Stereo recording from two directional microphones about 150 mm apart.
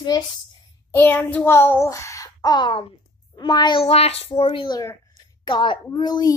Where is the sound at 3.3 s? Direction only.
30° left (ahead or behind).